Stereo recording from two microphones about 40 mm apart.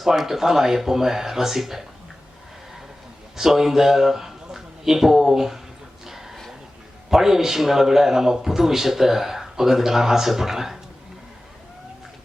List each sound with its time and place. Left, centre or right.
0.0 s a man's voice: centre
3.3 s a man's voice: centre
6.1 s a sound: centre
7.1 s a man's voice: centre